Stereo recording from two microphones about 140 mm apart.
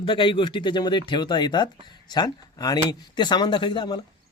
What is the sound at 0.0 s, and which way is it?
A man's voice, 35° left (ahead or behind).